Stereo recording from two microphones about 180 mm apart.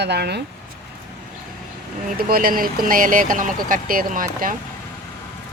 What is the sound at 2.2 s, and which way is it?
Speech, 55° right (ahead or behind).